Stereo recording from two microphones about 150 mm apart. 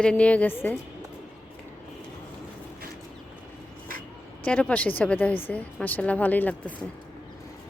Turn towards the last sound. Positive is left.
turn(degrees=10)  # may be behind; listen again after turning